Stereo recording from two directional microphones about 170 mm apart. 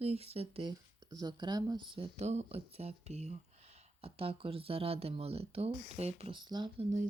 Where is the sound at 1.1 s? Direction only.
25° right (ahead or behind).